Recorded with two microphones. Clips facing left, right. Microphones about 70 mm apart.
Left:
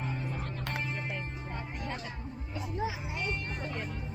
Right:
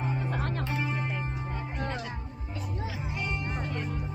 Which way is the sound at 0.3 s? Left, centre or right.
Right.